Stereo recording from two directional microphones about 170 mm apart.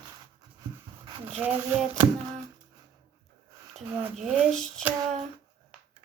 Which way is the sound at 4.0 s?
5° right (ahead or behind).